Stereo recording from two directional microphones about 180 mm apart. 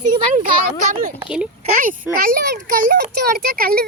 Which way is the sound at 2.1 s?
50° right (ahead or behind).